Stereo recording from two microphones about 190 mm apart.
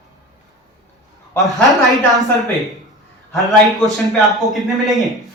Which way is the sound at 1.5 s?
Centre (ahead or behind).